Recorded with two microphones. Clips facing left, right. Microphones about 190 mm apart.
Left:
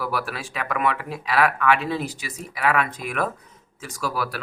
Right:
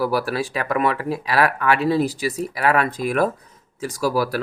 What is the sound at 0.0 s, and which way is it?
Speech, 35° right (ahead or behind).